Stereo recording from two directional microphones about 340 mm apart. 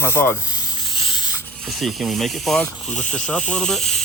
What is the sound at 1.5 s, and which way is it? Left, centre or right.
Speech, centre.